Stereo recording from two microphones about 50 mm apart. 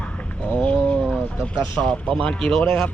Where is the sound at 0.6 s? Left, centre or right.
Left.